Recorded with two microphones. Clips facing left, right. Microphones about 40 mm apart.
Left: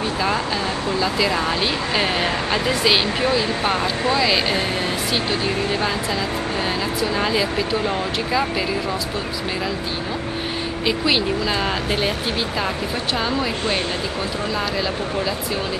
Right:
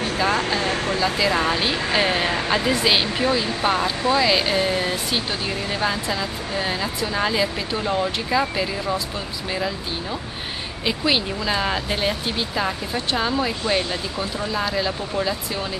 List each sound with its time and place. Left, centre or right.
0.5 s speech: right
1.3 s speech: centre
10.9 s speech: centre